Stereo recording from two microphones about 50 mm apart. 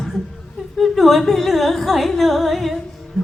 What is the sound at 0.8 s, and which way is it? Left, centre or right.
A woman's voice, centre.